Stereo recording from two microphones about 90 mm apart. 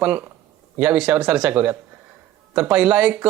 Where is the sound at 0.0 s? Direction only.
20° right (ahead or behind).